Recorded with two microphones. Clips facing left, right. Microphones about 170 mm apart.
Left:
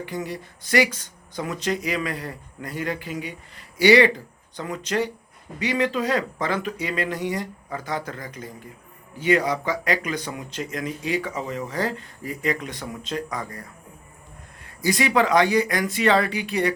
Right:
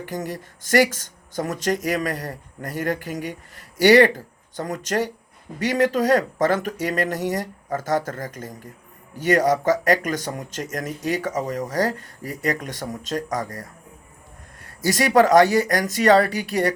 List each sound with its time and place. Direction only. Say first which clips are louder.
0.0 s speech: right 1 dB; 45° right (ahead or behind)
14.8 s speech: right 4 dB; 45° right (ahead or behind)